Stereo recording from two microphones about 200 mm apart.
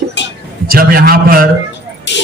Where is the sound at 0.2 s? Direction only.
65° left (ahead or behind).